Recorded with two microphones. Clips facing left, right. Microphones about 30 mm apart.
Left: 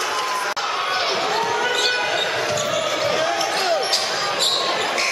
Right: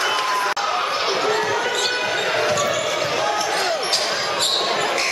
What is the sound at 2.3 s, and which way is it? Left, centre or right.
Basketball bounce, centre.